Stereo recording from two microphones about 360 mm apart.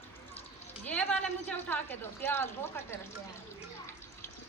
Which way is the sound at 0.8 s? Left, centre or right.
Centre.